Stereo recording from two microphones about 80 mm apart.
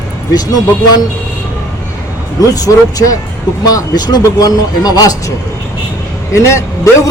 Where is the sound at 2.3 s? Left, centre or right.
Left.